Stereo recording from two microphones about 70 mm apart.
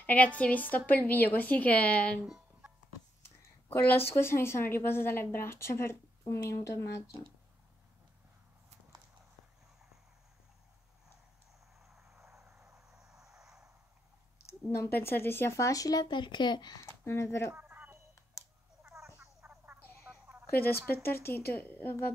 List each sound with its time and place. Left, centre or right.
0.0 s a woman's voice: left
2.2 s a sound: centre
3.6 s a woman's voice: left
6.2 s speech: left
11.9 s vehicle: centre
14.8 s speech: left
16.8 s speech: left
17.6 s a sound: right
19.4 s frog: centre
20.8 s a woman's voice: left